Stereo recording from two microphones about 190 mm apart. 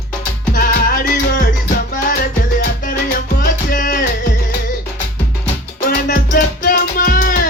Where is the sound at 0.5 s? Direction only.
50° left (ahead or behind).